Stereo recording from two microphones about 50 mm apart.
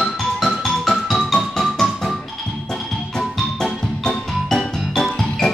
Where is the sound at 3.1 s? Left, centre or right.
Centre.